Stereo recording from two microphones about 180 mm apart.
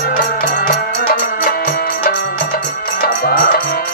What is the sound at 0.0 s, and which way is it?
Music, 50° left (ahead or behind).